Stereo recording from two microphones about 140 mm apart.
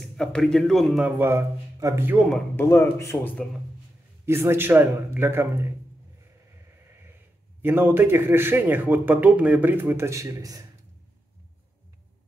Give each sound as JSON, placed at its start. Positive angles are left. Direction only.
{"t": 0.0, "sound": "speech", "side_deg": 5}
{"t": 1.0, "sound": "a man's voice", "side_deg": -15}
{"t": 2.1, "sound": "speech", "side_deg": 0}
{"t": 2.5, "sound": "speech", "side_deg": 15}
{"t": 4.3, "sound": "a man's voice", "side_deg": -20}
{"t": 7.6, "sound": "a man's voice", "side_deg": -15}